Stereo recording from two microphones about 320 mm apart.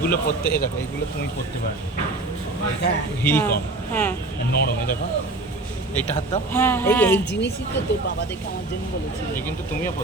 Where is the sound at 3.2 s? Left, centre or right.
Centre.